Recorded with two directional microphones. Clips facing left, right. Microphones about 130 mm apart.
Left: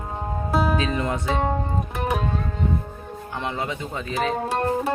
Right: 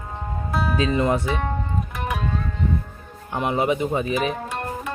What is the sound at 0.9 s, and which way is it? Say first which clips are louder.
Speech: right 5 dB; 25° right (ahead or behind).